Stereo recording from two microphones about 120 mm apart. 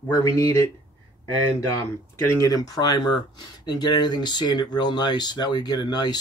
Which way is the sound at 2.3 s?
30° left (ahead or behind).